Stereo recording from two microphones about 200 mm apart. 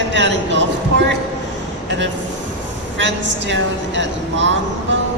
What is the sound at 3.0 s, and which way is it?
A woman's voice, 65° right (ahead or behind).